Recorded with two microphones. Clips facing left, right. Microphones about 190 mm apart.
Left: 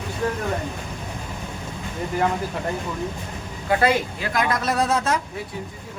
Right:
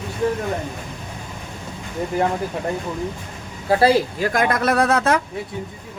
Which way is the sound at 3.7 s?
30° right (ahead or behind).